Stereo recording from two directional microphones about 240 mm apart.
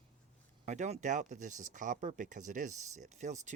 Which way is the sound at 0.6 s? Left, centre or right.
Right.